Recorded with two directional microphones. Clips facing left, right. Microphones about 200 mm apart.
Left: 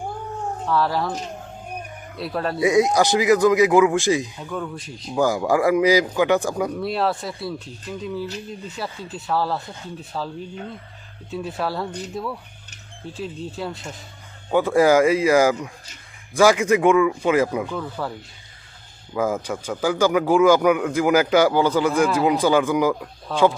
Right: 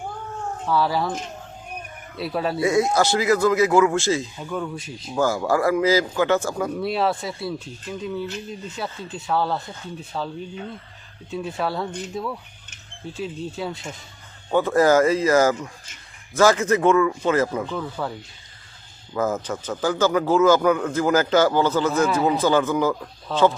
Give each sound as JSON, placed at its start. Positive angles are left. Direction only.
{"t": 0.6, "sound": "speech", "side_deg": 0}
{"t": 2.1, "sound": "speech", "side_deg": 0}
{"t": 2.6, "sound": "speech", "side_deg": 15}
{"t": 4.4, "sound": "speech", "side_deg": 0}
{"t": 5.1, "sound": "speech", "side_deg": 15}
{"t": 6.7, "sound": "speech", "side_deg": 0}
{"t": 11.9, "sound": "speech", "side_deg": 35}
{"t": 12.1, "sound": "speech", "side_deg": 0}
{"t": 14.5, "sound": "speech", "side_deg": 10}
{"t": 17.7, "sound": "speech", "side_deg": 0}
{"t": 19.1, "sound": "speech", "side_deg": 10}
{"t": 22.0, "sound": "speech", "side_deg": 0}
{"t": 22.3, "sound": "speech", "side_deg": 10}